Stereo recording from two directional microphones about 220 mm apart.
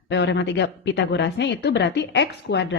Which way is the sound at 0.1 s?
55° left (ahead or behind).